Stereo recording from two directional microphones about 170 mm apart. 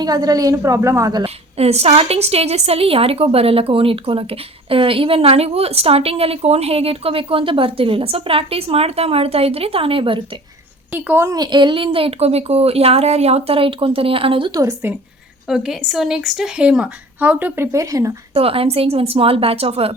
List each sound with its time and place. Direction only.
0.0 s a woman's voice: 25° right (ahead or behind)
1.2 s a woman's voice: 35° right (ahead or behind)
10.9 s a woman's voice: 10° right (ahead or behind)
15.4 s speech: 5° right (ahead or behind)
18.3 s a woman's voice: 35° right (ahead or behind)